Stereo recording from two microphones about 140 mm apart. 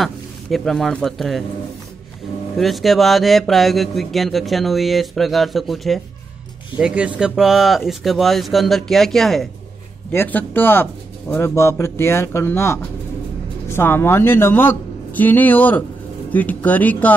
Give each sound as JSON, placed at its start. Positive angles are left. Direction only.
{"t": 0.0, "sound": "a man's voice", "side_deg": 0}
{"t": 2.5, "sound": "speech", "side_deg": 0}
{"t": 10.1, "sound": "speech", "side_deg": 15}